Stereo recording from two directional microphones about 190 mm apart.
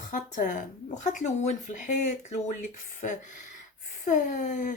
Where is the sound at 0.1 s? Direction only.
45° left (ahead or behind).